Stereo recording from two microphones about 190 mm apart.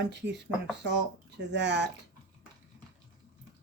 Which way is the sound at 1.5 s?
65° right (ahead or behind).